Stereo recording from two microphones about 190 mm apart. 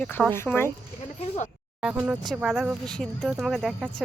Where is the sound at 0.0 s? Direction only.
10° left (ahead or behind).